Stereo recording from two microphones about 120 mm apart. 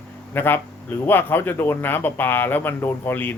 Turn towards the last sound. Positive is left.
turn(degrees=15)  # may be behind; listen again after turning